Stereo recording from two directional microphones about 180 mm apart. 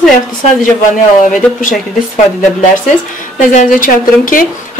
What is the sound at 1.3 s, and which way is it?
Speech, 45° left (ahead or behind).